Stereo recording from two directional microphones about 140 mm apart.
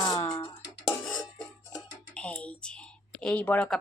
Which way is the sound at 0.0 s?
35° left (ahead or behind).